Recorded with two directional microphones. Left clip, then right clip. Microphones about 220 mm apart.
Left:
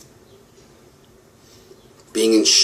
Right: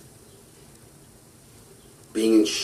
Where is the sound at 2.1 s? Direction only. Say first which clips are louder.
Left 4 dB; 30° left (ahead or behind).